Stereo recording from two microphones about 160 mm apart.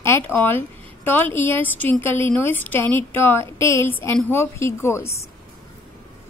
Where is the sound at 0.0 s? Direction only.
15° left (ahead or behind).